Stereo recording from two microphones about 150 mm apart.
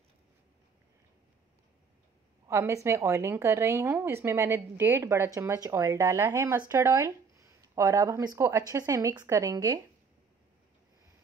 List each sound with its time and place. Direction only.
2.4 s a woman's voice: 20° right (ahead or behind)